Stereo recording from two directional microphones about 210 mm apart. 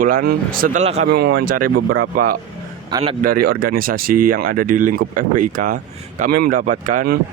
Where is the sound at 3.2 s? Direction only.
45° right (ahead or behind).